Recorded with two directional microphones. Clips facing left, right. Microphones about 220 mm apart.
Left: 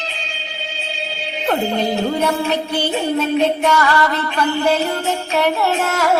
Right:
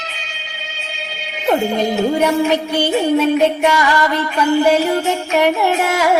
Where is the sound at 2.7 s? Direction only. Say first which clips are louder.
Right 5 dB; 10° right (ahead or behind).